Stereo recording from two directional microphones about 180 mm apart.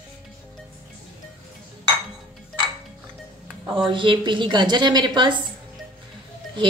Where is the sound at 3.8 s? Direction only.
25° right (ahead or behind).